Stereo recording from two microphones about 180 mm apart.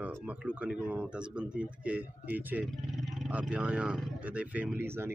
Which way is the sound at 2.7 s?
Centre (ahead or behind).